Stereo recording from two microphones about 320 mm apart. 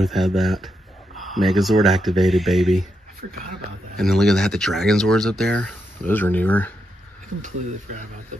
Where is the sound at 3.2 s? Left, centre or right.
Right.